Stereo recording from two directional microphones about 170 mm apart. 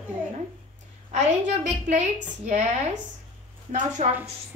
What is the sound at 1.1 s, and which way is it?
A woman's voice, 45° right (ahead or behind).